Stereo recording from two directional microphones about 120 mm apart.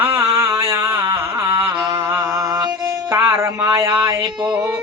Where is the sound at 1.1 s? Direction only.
40° right (ahead or behind).